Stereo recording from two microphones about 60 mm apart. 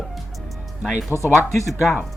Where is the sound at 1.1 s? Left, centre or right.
Right.